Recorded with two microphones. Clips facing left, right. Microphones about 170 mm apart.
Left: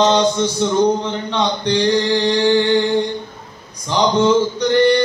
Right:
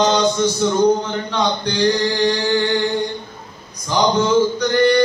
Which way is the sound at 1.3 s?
30° left (ahead or behind).